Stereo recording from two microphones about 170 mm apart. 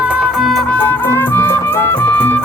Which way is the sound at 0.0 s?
5° right (ahead or behind).